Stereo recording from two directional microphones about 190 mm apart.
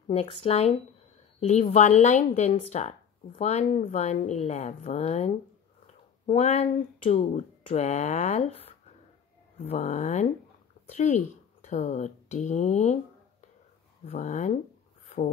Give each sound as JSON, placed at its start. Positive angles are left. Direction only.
{"t": 0.1, "sound": "speech", "side_deg": 30}
{"t": 14.0, "sound": "speech", "side_deg": 40}